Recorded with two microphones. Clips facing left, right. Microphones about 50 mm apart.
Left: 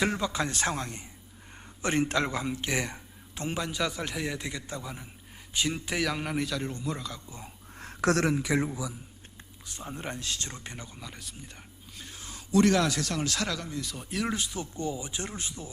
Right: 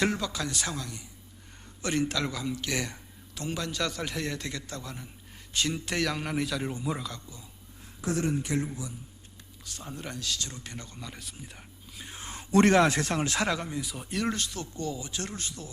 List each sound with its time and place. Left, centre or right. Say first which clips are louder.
0.1 s speech: left 2 dB; centre
0.4 s speech: left 3 dB; left
3.6 s a man's voice: left 1 dB; centre
7.8 s a sound: left 5 dB; left
9.7 s speech: left 2 dB; left
10.8 s speech: right 1 dB; centre
11.1 s speech: right 1 dB; centre
12.0 s speech: right 4 dB; right
13.8 s speech: right 1 dB; centre